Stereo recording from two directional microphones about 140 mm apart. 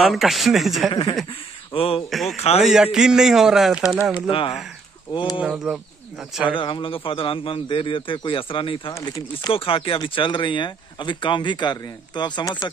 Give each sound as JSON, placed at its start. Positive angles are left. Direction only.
{"t": 0.0, "sound": "a man's voice", "side_deg": 0}
{"t": 1.7, "sound": "speech", "side_deg": 40}
{"t": 2.0, "sound": "a man's voice", "side_deg": 0}
{"t": 2.3, "sound": "speech", "side_deg": 50}
{"t": 2.6, "sound": "a man's voice", "side_deg": -5}
{"t": 4.3, "sound": "speech", "side_deg": 40}
{"t": 5.1, "sound": "speech", "side_deg": 30}
{"t": 5.4, "sound": "speech", "side_deg": -5}
{"t": 6.4, "sound": "speech", "side_deg": 35}
{"t": 8.9, "sound": "speech", "side_deg": 30}
{"t": 9.5, "sound": "speech", "side_deg": 40}